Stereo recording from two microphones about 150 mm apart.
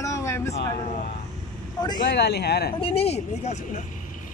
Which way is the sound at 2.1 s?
90° left.